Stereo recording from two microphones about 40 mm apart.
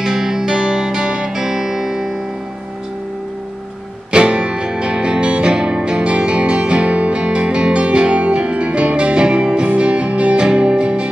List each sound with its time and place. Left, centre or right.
0.0 s music: centre
4.1 s music: right